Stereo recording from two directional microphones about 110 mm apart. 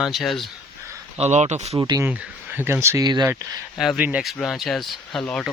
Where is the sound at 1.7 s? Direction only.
35° right (ahead or behind).